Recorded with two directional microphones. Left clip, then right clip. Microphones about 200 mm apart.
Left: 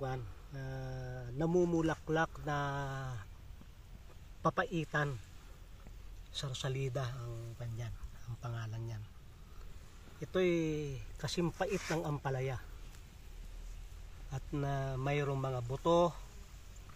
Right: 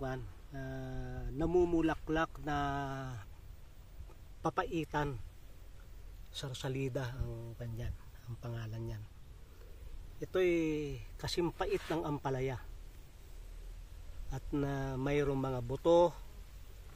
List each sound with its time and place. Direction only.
0.0 s speech: 25° right (ahead or behind); by 3.3 s 45° right (ahead or behind)
4.4 s speech: 50° right (ahead or behind)
6.3 s speech: 55° right (ahead or behind)
10.2 s speech: 50° right (ahead or behind)
14.3 s speech: 55° right (ahead or behind)